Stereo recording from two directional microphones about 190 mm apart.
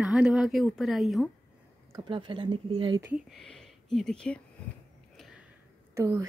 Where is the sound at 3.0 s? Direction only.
Centre (ahead or behind).